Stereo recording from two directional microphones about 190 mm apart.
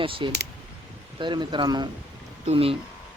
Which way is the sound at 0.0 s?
30° right (ahead or behind).